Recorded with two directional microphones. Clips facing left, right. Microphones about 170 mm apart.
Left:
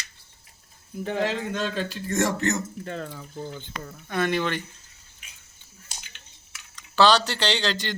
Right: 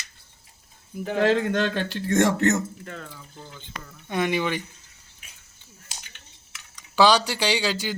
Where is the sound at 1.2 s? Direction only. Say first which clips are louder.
Right 10 dB; 65° right (ahead or behind).